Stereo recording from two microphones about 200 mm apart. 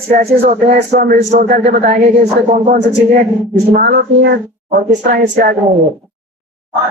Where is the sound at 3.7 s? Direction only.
55° right (ahead or behind).